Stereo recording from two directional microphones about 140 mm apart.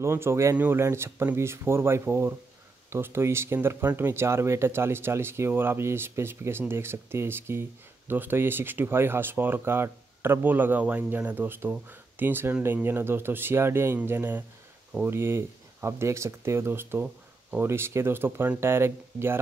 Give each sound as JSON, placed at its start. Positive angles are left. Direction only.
{"t": 0.0, "sound": "speech", "side_deg": -20}